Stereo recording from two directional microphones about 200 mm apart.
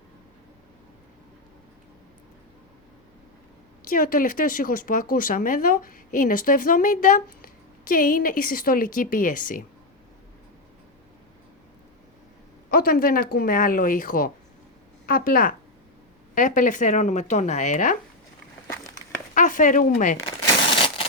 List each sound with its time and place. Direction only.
3.8 s speech: 45° left (ahead or behind)
12.7 s speech: 45° left (ahead or behind)
19.3 s speech: 40° left (ahead or behind)
20.7 s a sound: 25° left (ahead or behind)